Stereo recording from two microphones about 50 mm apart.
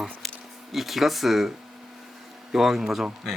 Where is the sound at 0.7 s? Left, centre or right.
Centre.